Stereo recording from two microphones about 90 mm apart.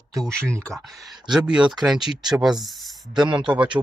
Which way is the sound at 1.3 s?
10° right (ahead or behind).